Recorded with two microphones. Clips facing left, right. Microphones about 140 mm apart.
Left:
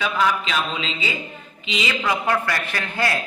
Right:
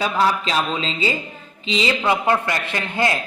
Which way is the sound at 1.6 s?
35° right (ahead or behind).